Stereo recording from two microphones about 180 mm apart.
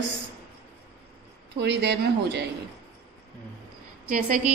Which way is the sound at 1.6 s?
70° right (ahead or behind).